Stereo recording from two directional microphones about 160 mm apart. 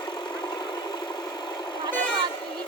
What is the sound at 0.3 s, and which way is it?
Vehicle, 25° left (ahead or behind).